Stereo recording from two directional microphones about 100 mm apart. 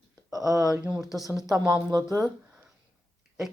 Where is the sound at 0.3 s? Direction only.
35° right (ahead or behind).